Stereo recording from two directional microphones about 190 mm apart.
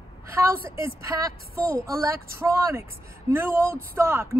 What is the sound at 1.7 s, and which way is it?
A woman's voice, 15° right (ahead or behind).